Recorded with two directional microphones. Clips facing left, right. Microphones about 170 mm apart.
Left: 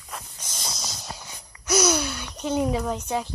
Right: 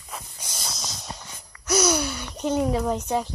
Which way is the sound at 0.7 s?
Centre (ahead or behind).